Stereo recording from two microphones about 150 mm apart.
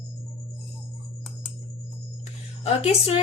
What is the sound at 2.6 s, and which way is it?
Speech, 45° left (ahead or behind).